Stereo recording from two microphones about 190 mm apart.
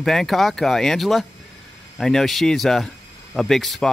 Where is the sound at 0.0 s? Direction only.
Centre (ahead or behind).